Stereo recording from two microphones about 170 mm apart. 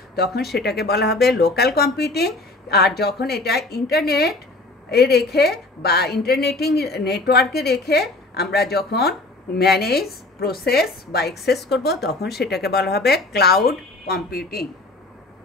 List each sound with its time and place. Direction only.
0.1 s a woman's voice: 70° left (ahead or behind)